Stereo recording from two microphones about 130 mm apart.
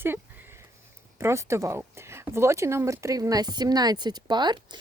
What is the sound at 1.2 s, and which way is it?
Speech, 20° right (ahead or behind).